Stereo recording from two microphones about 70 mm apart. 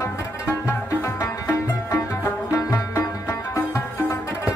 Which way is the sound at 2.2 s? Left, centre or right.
Left.